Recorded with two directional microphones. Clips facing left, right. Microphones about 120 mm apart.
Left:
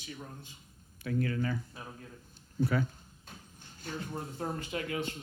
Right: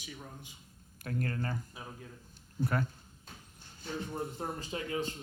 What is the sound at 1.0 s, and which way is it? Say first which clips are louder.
Speech: left 4 dB; 45° right (ahead or behind).